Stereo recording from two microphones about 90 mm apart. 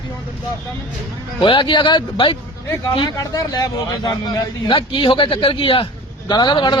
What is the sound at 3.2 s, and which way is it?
A man's voice, 40° left (ahead or behind).